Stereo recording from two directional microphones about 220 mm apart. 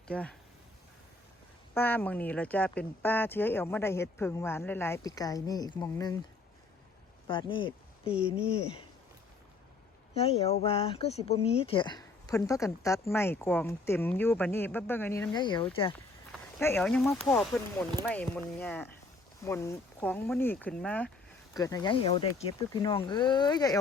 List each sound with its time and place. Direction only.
0.1 s speech: 5° left (ahead or behind)
1.7 s speech: 10° left (ahead or behind)
7.3 s speech: 20° left (ahead or behind)
10.2 s speech: 25° left (ahead or behind)
16.6 s speech: 10° left (ahead or behind)
21.6 s speech: 15° left (ahead or behind)